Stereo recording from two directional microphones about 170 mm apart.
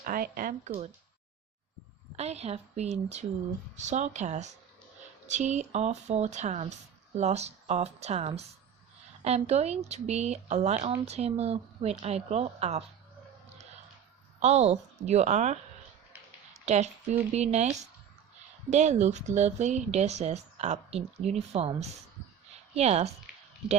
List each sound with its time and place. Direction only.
0.0 s speech: 55° right (ahead or behind)
2.1 s speech: 40° right (ahead or behind)
14.4 s speech: 40° right (ahead or behind)